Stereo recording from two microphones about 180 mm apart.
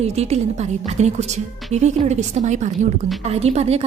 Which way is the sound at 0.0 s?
35° right (ahead or behind).